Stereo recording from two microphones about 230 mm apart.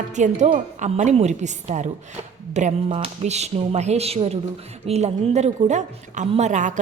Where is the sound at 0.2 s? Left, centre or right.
Right.